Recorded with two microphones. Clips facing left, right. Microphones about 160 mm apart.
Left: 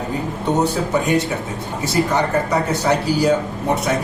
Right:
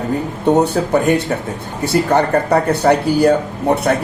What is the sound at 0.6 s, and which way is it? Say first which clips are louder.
Speech: right 4 dB; 60° right (ahead or behind).